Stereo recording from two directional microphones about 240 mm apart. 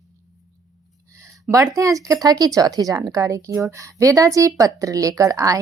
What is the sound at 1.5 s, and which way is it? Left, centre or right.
Speech, centre.